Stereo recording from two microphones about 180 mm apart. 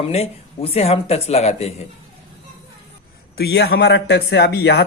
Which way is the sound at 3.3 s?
65° left (ahead or behind).